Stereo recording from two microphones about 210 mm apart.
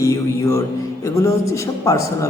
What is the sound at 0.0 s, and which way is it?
Speech, 15° left (ahead or behind).